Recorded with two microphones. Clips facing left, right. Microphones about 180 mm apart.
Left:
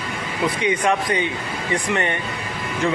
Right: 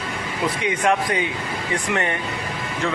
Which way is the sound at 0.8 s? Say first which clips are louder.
Right 3 dB; centre (ahead or behind).